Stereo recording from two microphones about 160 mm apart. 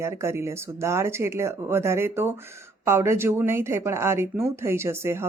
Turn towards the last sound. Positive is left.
turn(degrees=-15)  # may be behind; listen again after turning